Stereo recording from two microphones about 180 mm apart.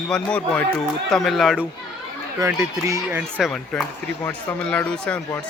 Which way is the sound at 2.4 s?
15° right (ahead or behind).